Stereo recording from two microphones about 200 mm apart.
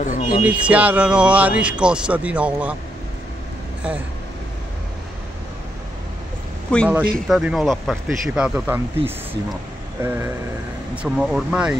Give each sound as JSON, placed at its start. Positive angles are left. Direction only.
{"t": 0.0, "sound": "a sound", "side_deg": 35}
{"t": 0.7, "sound": "speech", "side_deg": -5}
{"t": 6.7, "sound": "speech", "side_deg": 5}